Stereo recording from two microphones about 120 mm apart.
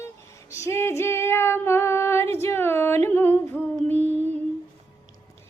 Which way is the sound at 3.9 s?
70° right (ahead or behind).